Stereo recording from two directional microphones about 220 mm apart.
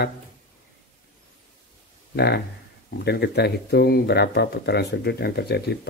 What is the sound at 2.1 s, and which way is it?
Speech, 50° left (ahead or behind).